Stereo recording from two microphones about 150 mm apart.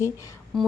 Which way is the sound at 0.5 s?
Centre (ahead or behind).